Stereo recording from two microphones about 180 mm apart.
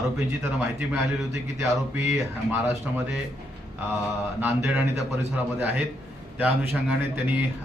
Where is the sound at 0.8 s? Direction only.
15° right (ahead or behind).